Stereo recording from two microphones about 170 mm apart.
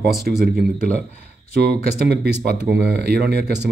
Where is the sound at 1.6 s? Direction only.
70° right (ahead or behind).